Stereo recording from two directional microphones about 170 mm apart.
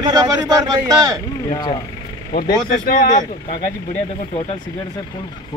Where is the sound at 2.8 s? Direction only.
55° left (ahead or behind).